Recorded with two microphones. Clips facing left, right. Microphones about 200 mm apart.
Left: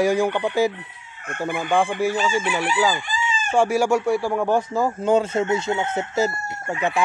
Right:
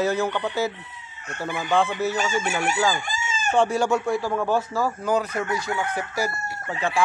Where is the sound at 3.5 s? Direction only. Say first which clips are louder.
Left 2 dB; 10° left (ahead or behind).